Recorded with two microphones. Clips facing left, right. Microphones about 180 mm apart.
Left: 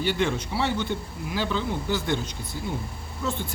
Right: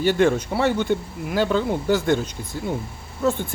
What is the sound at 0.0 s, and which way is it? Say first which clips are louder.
Speech: right 7 dB; 50° right (ahead or behind).